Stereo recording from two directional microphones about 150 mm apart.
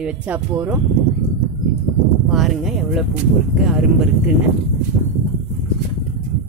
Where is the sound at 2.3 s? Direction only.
Centre (ahead or behind).